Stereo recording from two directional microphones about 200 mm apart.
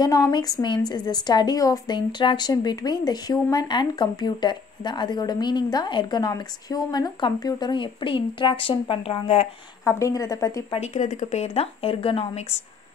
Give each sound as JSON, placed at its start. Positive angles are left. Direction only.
{"t": 0.0, "sound": "a woman's voice", "side_deg": 20}
{"t": 9.8, "sound": "a woman's voice", "side_deg": 15}
{"t": 10.7, "sound": "speech", "side_deg": 35}